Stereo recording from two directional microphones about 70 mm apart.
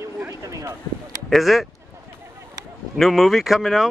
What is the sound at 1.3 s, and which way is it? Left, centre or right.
Speech, centre.